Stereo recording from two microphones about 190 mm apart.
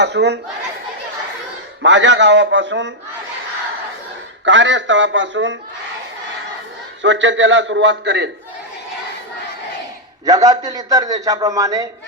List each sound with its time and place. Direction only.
0.0 s speech: 65° right (ahead or behind)
1.8 s a man's voice: 70° right (ahead or behind)
4.4 s a man's voice: 70° right (ahead or behind)
7.0 s a man's voice: 75° right (ahead or behind)
10.2 s a man's voice: 20° right (ahead or behind)